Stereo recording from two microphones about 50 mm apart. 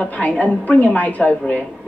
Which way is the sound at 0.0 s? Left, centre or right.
Left.